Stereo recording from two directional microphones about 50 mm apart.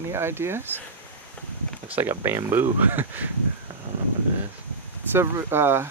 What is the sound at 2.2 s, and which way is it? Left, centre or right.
Speech, right.